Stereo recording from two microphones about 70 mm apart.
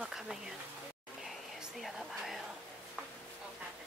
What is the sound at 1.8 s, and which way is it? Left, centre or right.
Speech, centre.